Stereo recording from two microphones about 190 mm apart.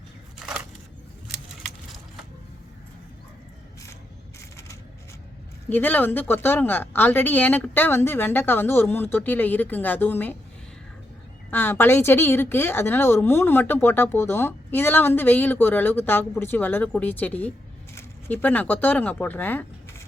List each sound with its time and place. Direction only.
4.4 s a sound: 15° left (ahead or behind)
5.6 s a woman's voice: 10° left (ahead or behind)
11.5 s a woman's voice: 10° left (ahead or behind)